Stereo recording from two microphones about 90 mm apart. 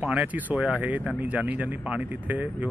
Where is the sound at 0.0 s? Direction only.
15° right (ahead or behind).